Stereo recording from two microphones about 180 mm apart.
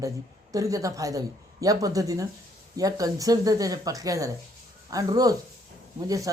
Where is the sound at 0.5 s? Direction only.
20° right (ahead or behind).